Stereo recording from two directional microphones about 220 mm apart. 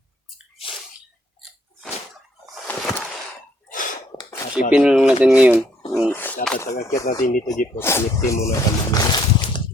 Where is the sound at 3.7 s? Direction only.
35° left (ahead or behind).